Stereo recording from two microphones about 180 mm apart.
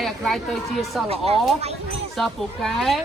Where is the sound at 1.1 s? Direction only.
35° right (ahead or behind).